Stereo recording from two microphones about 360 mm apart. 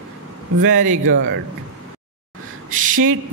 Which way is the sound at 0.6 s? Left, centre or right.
Right.